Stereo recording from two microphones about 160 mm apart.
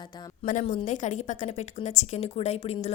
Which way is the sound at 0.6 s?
45° left (ahead or behind).